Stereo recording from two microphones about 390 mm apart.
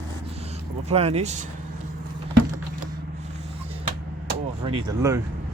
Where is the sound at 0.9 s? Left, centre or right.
Centre.